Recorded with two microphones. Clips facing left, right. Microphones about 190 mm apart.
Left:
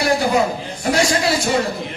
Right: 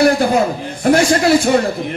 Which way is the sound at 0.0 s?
55° right (ahead or behind).